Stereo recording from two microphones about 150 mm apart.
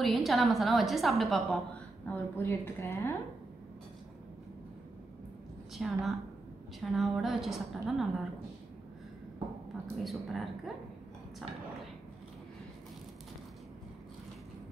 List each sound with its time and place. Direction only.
0.0 s a woman's voice: centre (ahead or behind)
2.0 s a woman's voice: 15° left (ahead or behind)
5.8 s a woman's voice: centre (ahead or behind)
10.0 s a woman's voice: centre (ahead or behind)